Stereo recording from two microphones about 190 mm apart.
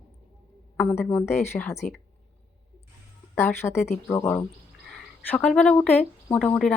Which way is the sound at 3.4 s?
15° left (ahead or behind).